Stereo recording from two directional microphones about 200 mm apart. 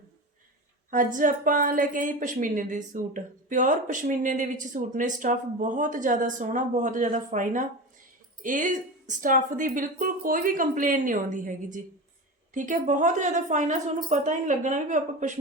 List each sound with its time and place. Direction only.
0.9 s a woman's voice: 40° right (ahead or behind)